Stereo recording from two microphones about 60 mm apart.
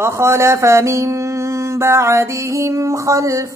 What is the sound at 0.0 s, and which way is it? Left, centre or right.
Mantra, right.